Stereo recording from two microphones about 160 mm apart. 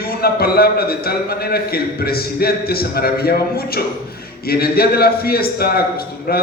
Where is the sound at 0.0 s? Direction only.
70° left (ahead or behind).